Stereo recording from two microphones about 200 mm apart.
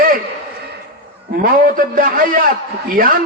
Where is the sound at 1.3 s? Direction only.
45° right (ahead or behind).